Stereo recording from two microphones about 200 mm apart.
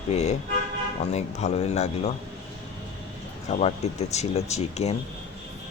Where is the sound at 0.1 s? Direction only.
35° left (ahead or behind).